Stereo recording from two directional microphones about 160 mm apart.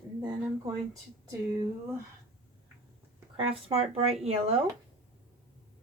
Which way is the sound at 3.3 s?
35° right (ahead or behind).